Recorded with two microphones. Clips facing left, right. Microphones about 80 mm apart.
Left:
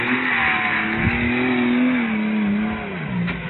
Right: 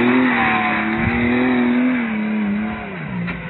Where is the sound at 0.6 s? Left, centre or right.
Centre.